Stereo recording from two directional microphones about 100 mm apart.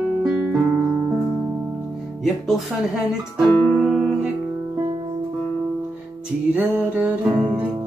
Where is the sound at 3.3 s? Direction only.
5° right (ahead or behind).